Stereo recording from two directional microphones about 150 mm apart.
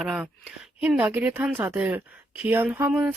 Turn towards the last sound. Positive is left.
turn(degrees=-10)  # may be behind; listen again after turning